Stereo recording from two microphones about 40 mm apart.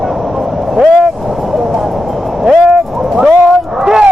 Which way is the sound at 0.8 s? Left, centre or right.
Centre.